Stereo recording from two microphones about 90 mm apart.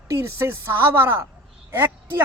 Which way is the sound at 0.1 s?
30° right (ahead or behind).